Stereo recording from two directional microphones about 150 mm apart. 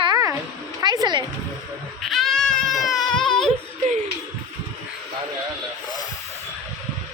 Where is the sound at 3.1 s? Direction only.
30° left (ahead or behind).